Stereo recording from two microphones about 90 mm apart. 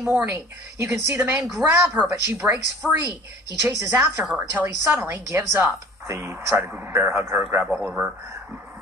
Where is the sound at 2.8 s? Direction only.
15° right (ahead or behind).